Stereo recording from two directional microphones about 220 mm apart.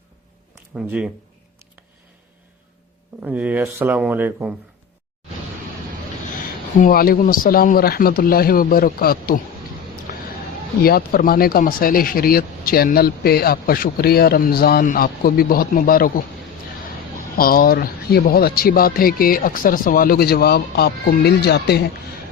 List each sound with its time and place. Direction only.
0.8 s speech: 5° right (ahead or behind)
3.2 s speech: 10° right (ahead or behind)
6.7 s a man's voice: 40° left (ahead or behind)
10.8 s speech: 45° left (ahead or behind)
17.3 s a man's voice: 40° left (ahead or behind)